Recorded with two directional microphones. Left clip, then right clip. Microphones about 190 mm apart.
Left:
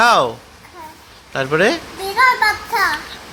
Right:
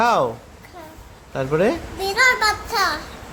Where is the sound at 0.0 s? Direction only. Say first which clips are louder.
Left 5 dB; 5° right (ahead or behind).